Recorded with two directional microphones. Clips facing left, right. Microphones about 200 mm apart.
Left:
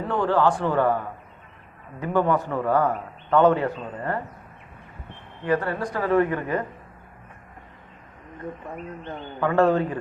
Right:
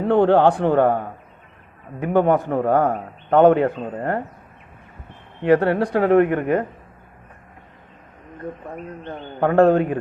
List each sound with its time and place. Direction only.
0.0 s a man's voice: 60° right (ahead or behind)
2.1 s a man's voice: 55° right (ahead or behind)
5.4 s a man's voice: 70° right (ahead or behind)
9.4 s a man's voice: 55° right (ahead or behind)